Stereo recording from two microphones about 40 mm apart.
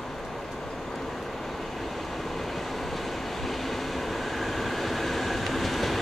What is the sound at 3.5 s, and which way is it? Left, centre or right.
Train, centre.